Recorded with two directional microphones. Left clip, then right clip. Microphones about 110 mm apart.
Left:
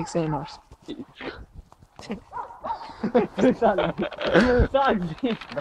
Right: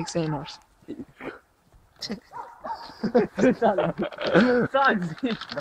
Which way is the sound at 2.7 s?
65° right (ahead or behind).